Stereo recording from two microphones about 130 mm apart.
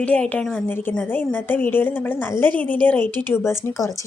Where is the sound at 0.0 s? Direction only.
10° left (ahead or behind).